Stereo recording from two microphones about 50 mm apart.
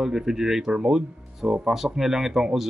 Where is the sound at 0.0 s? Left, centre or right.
Centre.